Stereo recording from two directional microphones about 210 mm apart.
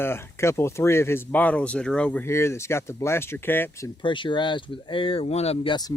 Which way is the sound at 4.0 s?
25° left (ahead or behind).